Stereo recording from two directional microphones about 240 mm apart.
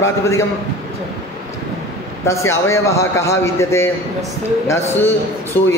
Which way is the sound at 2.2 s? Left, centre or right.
Centre.